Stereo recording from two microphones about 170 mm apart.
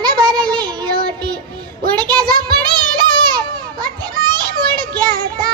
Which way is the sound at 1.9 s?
25° right (ahead or behind).